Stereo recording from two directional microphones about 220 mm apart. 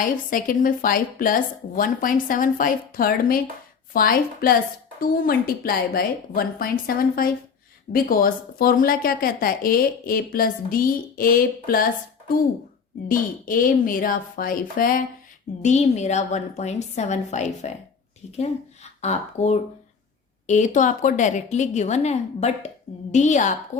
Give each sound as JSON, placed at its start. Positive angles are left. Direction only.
{"t": 0.0, "sound": "speech", "side_deg": 40}
{"t": 13.1, "sound": "speech", "side_deg": 40}